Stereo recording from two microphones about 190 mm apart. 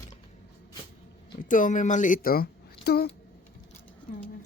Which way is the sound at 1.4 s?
45° left (ahead or behind).